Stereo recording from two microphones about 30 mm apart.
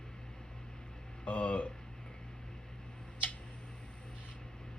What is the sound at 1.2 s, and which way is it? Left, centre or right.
Speech, left.